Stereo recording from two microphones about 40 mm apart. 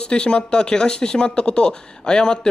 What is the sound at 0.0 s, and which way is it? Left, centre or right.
Speech, left.